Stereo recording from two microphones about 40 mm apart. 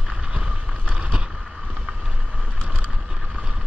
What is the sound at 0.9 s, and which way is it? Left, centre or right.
Boat, right.